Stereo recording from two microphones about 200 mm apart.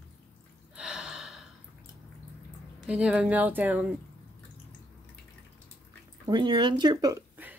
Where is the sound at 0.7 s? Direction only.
5° right (ahead or behind).